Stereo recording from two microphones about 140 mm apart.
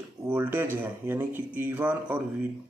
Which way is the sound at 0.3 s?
15° right (ahead or behind).